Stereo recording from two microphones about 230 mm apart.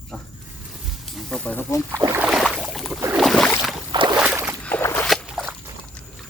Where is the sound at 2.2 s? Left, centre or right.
Centre.